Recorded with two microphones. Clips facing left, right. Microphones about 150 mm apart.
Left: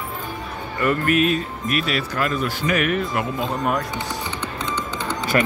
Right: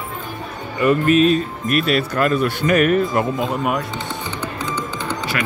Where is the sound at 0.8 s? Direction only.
20° right (ahead or behind).